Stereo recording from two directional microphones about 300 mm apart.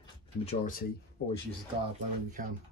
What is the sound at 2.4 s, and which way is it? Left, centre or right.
Speech, right.